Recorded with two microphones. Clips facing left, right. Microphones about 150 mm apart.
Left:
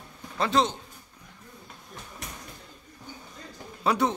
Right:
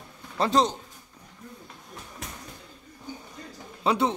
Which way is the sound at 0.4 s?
40° right (ahead or behind).